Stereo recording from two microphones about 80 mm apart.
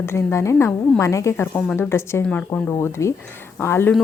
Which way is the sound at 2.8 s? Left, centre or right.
Left.